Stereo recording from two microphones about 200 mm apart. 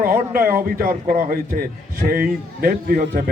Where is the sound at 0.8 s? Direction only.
45° right (ahead or behind).